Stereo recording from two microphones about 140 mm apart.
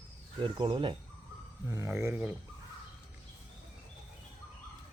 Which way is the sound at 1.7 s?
20° right (ahead or behind).